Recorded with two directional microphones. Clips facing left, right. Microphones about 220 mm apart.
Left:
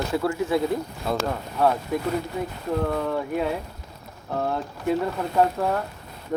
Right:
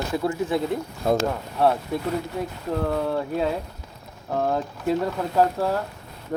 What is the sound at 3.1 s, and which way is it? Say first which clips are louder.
Speech: even; 35° right (ahead or behind).